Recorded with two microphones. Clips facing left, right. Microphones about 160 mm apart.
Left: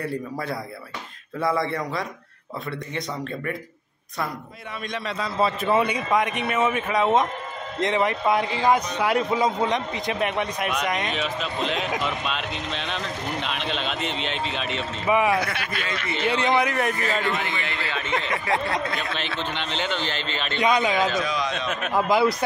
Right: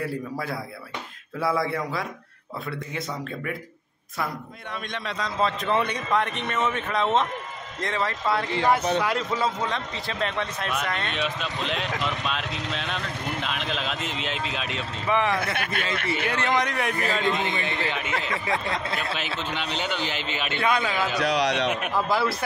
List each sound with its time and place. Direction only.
0.0 s speech: centre (ahead or behind)
4.9 s a man's voice: 5° left (ahead or behind)
11.1 s speech: centre (ahead or behind)
15.0 s a man's voice: 10° left (ahead or behind)
15.5 s a man's voice: 55° right (ahead or behind)
16.3 s a man's voice: 10° left (ahead or behind)
17.2 s a man's voice: 20° right (ahead or behind)
19.1 s a man's voice: 10° right (ahead or behind)
20.5 s a man's voice: 15° left (ahead or behind)
21.2 s a man's voice: 70° right (ahead or behind)
21.9 s a man's voice: 15° left (ahead or behind)